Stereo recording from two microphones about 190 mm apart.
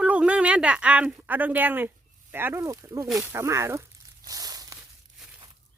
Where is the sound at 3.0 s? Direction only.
Centre (ahead or behind).